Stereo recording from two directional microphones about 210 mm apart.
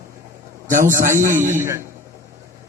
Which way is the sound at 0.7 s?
40° right (ahead or behind).